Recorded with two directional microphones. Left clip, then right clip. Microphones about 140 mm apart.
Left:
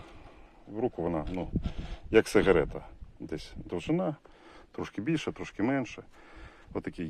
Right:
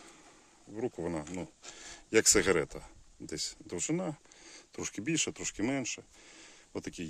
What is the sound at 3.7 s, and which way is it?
Speech, 15° right (ahead or behind).